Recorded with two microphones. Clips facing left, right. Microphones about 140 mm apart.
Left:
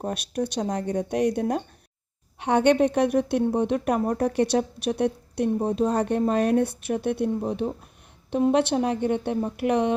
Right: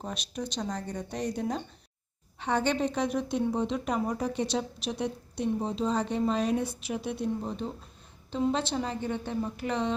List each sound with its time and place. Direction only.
0.0 s a woman's voice: 60° left (ahead or behind)